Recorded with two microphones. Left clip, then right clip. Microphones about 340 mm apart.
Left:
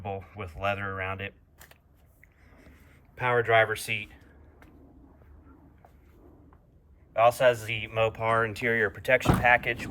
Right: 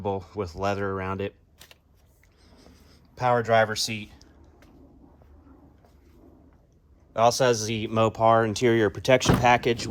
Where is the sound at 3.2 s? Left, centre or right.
Centre.